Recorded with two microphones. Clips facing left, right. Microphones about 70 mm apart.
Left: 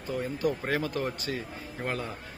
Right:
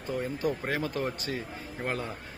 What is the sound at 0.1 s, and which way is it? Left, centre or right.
A man's voice, right.